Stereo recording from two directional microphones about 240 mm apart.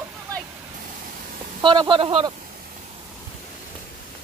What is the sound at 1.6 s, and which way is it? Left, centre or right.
Speech, centre.